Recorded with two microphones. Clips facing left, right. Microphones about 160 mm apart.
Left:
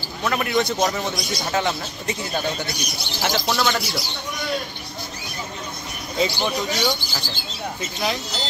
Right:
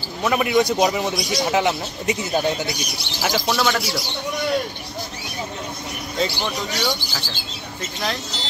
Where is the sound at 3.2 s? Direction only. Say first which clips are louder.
Right 1 dB; 5° right (ahead or behind).